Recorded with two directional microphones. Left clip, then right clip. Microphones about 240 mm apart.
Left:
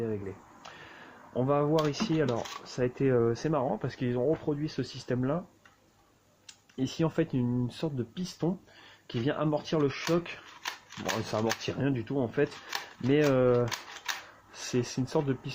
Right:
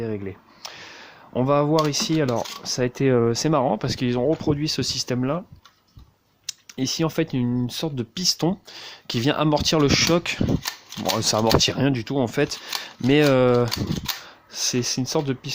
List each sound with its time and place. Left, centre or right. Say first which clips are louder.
0.0 s speech: right 5 dB; right
6.5 s speech: right 9 dB; right
14.5 s speech: right 8 dB; right